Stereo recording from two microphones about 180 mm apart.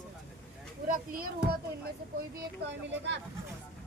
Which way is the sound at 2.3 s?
80° right.